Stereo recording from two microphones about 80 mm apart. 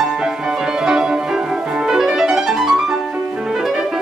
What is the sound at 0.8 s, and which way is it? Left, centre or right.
Music, centre.